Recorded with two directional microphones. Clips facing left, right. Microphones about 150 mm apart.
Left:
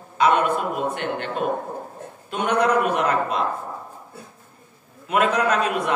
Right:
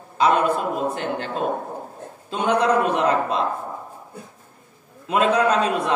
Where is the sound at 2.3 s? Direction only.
30° right (ahead or behind).